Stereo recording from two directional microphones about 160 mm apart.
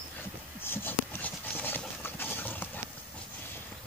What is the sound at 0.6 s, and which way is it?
Clip-clop, 15° left (ahead or behind).